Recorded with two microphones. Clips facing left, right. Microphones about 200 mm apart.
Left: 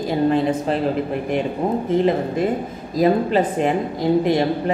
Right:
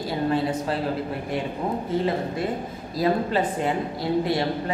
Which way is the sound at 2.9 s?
20° left (ahead or behind).